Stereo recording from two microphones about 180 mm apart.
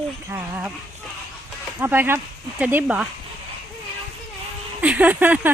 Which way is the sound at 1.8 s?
10° right (ahead or behind).